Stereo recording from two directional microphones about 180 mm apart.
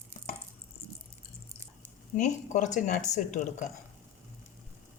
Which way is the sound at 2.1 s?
45° left (ahead or behind).